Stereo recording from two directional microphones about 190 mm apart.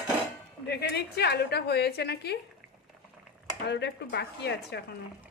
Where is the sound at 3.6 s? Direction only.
65° left (ahead or behind).